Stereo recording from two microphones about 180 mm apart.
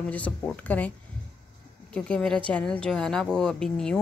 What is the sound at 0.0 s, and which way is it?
Speech, 10° left (ahead or behind).